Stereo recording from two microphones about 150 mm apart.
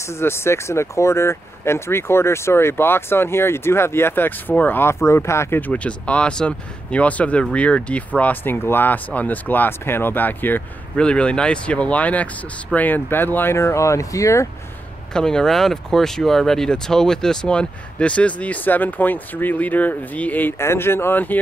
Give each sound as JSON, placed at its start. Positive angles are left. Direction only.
{"t": 0.0, "sound": "speech", "side_deg": 15}
{"t": 15.1, "sound": "speech", "side_deg": 5}